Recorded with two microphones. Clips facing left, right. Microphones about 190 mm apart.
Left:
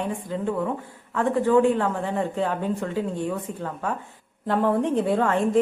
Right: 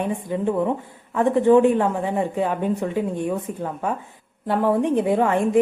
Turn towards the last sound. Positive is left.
turn(degrees=-15)  # may be behind; listen again after turning